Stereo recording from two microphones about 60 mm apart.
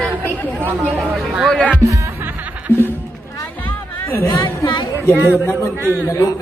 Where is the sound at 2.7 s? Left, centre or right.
Left.